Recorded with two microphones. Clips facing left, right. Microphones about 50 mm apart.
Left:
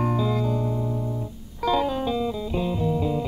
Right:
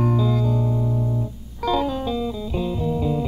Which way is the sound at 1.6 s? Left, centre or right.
Centre.